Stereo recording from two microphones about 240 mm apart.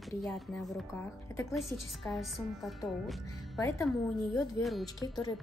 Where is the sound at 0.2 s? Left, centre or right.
Centre.